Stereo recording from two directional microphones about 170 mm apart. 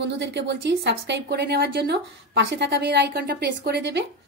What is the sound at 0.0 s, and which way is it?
A woman's voice, 90° right.